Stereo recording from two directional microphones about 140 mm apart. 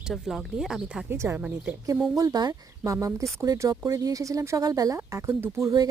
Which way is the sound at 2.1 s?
25° right (ahead or behind).